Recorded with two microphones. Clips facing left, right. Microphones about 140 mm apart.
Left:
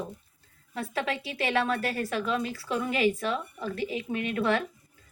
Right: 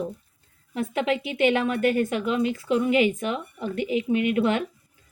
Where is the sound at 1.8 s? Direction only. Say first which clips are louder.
Right 9 dB; 35° left (ahead or behind).